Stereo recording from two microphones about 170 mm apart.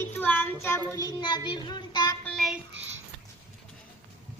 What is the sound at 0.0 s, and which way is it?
Child singing, 10° left (ahead or behind).